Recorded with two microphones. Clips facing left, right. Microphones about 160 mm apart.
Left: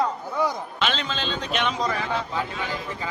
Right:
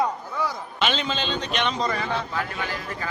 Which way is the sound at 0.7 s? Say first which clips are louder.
Right 2 dB; centre (ahead or behind).